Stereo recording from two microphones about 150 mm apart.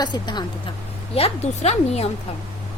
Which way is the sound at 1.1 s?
45° left (ahead or behind).